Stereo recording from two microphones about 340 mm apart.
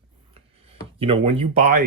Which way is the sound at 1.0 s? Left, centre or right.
Centre.